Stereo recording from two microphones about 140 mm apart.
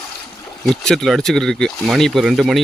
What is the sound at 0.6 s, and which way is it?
Speech, centre (ahead or behind).